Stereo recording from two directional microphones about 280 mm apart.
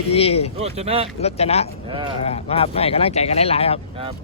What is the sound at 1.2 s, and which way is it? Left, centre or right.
Speech, left.